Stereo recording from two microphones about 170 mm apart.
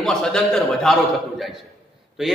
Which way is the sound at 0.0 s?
5° left (ahead or behind).